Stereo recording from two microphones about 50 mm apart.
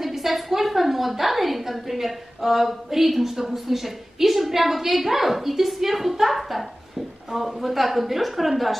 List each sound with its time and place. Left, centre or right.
0.0 s a woman's voice: centre